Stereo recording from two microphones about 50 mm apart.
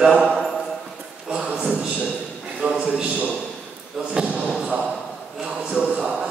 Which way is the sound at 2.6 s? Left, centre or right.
Right.